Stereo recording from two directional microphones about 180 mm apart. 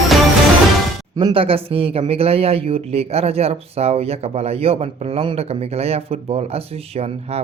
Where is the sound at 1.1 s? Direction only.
25° right (ahead or behind).